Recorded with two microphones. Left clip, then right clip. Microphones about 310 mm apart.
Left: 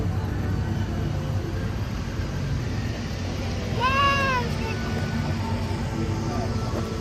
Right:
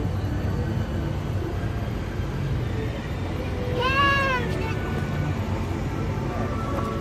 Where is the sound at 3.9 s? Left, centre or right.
Centre.